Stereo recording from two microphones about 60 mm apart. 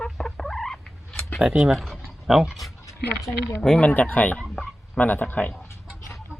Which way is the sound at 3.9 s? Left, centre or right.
Left.